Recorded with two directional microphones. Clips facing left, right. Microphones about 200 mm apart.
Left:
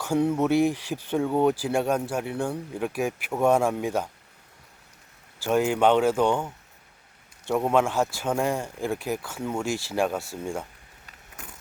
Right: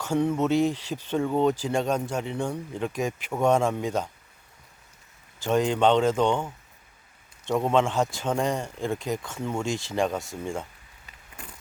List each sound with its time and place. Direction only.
0.0 s speech: 10° left (ahead or behind)
5.4 s speech: 5° left (ahead or behind)
7.4 s speech: 10° left (ahead or behind)